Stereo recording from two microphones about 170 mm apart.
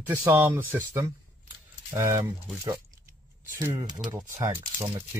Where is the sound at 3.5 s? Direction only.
20° right (ahead or behind).